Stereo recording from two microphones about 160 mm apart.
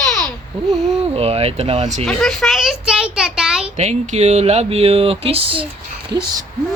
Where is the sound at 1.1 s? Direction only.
40° right (ahead or behind).